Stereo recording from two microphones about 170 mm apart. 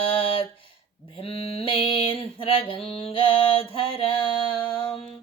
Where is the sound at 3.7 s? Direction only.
30° left (ahead or behind).